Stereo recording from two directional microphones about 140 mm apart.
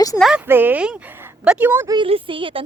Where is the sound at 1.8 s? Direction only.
30° right (ahead or behind).